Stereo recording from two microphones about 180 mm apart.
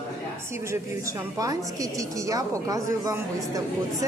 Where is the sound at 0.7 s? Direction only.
20° right (ahead or behind).